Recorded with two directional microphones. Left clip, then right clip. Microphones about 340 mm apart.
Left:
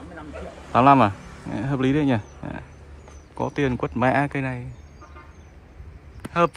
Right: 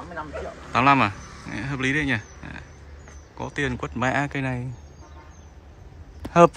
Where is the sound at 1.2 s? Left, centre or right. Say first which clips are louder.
Right 1 dB; left.